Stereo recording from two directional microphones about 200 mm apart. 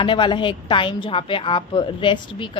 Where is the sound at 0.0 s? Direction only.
25° left (ahead or behind).